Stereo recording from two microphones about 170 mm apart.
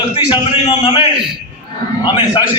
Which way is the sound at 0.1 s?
30° left (ahead or behind).